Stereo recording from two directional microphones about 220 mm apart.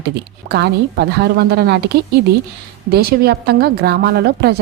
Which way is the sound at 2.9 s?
45° right (ahead or behind).